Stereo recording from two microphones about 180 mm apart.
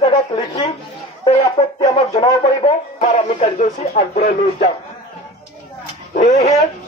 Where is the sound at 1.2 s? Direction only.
30° left (ahead or behind).